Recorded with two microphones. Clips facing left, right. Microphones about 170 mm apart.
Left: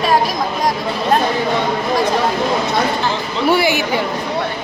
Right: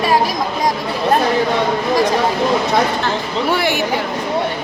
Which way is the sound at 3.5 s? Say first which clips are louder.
Left 4 dB; centre (ahead or behind).